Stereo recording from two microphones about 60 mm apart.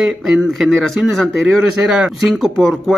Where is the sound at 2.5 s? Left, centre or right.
Centre.